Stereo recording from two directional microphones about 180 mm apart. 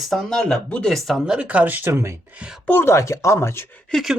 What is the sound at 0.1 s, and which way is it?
Speech, centre (ahead or behind).